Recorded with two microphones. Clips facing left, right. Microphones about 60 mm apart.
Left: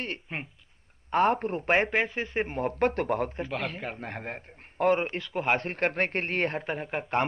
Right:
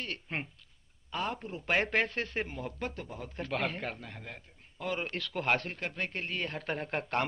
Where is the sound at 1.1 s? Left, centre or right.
Left.